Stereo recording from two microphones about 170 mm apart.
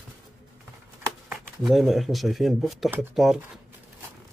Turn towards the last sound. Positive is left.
turn(degrees=0)  # may be behind; listen again after turning